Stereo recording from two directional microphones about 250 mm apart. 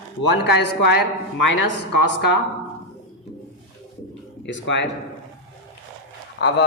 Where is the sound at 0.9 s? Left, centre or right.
Left.